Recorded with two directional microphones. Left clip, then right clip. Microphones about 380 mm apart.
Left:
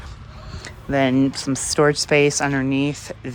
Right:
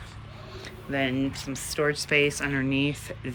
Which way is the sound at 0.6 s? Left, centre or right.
Centre.